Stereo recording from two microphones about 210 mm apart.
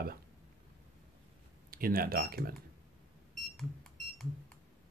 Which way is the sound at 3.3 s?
Centre (ahead or behind).